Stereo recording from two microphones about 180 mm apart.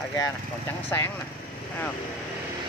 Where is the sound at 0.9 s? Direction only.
15° left (ahead or behind).